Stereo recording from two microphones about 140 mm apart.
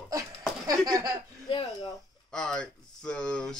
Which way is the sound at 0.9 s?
25° right (ahead or behind).